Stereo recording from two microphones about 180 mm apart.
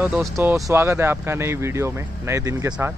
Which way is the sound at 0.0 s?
5° right (ahead or behind).